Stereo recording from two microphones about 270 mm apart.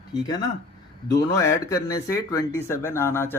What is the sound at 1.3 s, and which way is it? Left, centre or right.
Speech, centre.